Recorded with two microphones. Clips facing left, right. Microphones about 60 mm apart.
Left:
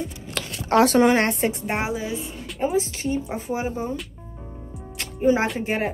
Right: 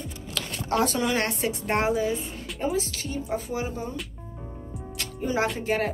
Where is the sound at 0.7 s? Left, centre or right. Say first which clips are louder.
Left 9 dB; left.